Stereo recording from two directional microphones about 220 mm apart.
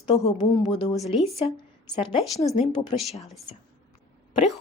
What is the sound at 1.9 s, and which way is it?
Speech, 20° left (ahead or behind).